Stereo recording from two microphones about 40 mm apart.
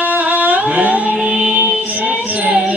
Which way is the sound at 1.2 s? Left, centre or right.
Right.